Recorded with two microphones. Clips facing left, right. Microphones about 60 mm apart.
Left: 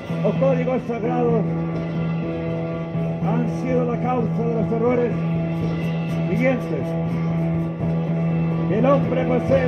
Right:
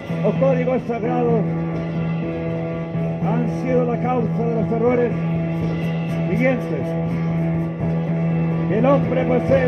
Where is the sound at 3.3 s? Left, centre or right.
Centre.